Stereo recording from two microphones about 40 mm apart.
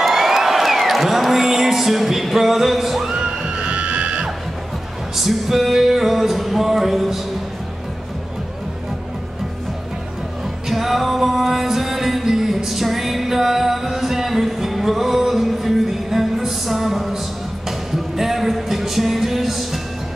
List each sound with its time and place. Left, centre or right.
0.0 s music: centre
3.1 s music: right
5.1 s music: centre
10.7 s music: centre